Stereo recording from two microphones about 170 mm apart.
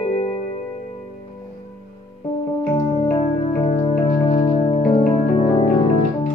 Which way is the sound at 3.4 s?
35° left (ahead or behind).